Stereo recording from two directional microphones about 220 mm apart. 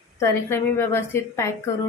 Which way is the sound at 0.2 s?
10° left (ahead or behind).